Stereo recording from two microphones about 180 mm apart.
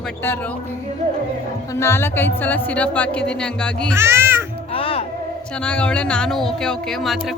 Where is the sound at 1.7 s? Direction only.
15° left (ahead or behind).